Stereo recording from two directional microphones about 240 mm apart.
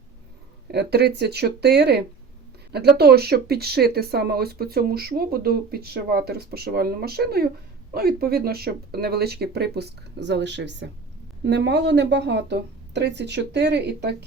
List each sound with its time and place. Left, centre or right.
0.7 s a woman's voice: right
3.0 s a woman's voice: right